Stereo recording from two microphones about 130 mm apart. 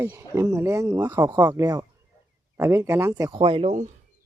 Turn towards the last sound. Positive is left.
turn(degrees=-60)  # may be behind; listen again after turning